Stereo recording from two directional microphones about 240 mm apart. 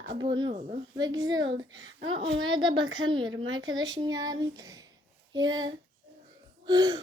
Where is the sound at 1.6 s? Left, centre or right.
Right.